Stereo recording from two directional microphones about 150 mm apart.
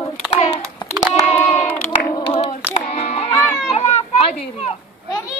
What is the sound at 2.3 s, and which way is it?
Child singing, 45° left (ahead or behind).